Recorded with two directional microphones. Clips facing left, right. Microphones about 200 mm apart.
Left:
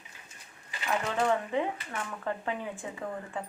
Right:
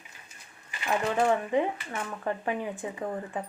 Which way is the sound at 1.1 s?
15° right (ahead or behind).